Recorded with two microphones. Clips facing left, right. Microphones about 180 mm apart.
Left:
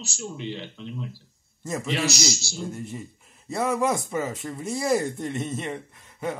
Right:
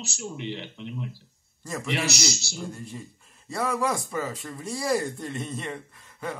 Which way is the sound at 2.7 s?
20° left (ahead or behind).